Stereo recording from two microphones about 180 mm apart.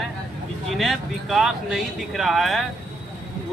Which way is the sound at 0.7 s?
Centre (ahead or behind).